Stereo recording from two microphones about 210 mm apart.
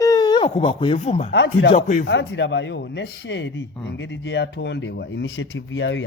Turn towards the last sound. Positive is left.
turn(degrees=60)  # may be behind; listen again after turning